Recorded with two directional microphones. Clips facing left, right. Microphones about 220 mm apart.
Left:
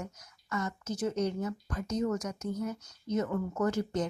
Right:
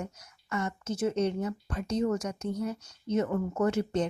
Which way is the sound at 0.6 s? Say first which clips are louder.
Right 3 dB; 25° right (ahead or behind).